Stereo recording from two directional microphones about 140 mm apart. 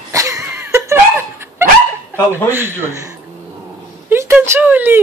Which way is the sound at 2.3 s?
15° right (ahead or behind).